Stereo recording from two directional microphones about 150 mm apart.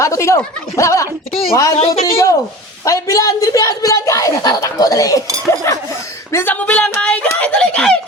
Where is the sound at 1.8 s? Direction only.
40° left (ahead or behind).